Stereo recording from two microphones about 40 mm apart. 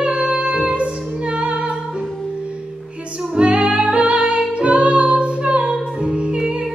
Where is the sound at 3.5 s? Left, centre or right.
Right.